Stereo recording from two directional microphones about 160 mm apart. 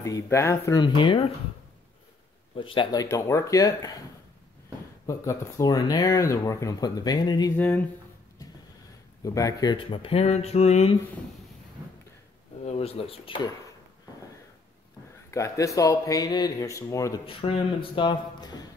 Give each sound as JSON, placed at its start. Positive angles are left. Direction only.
{"t": 0.0, "sound": "speech", "side_deg": 20}
{"t": 2.5, "sound": "speech", "side_deg": 30}
{"t": 5.0, "sound": "speech", "side_deg": 20}
{"t": 7.5, "sound": "speech", "side_deg": 10}
{"t": 9.2, "sound": "speech", "side_deg": 20}
{"t": 12.6, "sound": "speech", "side_deg": 40}
{"t": 15.3, "sound": "speech", "side_deg": 20}
{"t": 17.3, "sound": "speech", "side_deg": 35}